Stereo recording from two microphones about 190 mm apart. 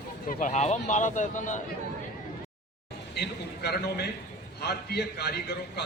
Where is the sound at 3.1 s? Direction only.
55° left (ahead or behind).